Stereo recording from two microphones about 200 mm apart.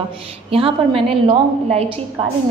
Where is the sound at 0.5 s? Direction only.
25° right (ahead or behind).